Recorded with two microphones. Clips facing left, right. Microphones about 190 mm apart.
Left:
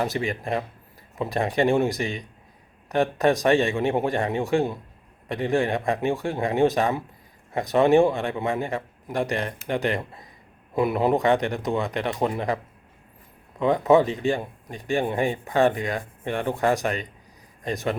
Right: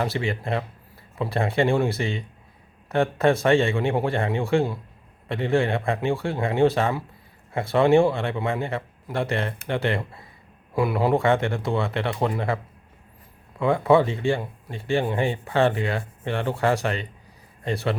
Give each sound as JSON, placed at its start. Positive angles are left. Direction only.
{"t": 0.0, "sound": "speech", "side_deg": 15}
{"t": 13.6, "sound": "a man's voice", "side_deg": 20}